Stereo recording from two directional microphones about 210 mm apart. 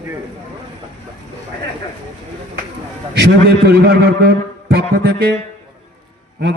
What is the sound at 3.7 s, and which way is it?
A man's voice, 50° right (ahead or behind).